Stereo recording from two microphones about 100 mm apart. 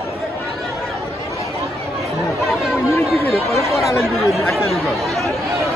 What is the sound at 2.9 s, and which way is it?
Chatter, 25° left (ahead or behind).